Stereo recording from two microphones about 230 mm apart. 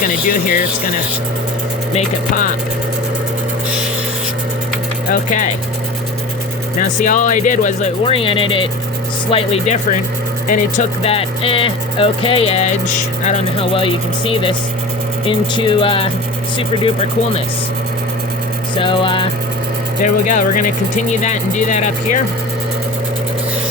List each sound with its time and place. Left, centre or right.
0.0 s speech: left
1.9 s speech: left
5.1 s speech: left
6.7 s speech: left
18.8 s speech: left
20.0 s speech: left